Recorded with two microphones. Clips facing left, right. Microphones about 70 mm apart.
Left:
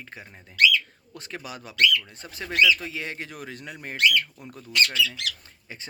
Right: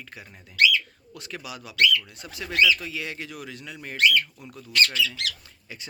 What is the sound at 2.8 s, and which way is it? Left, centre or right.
Speech, left.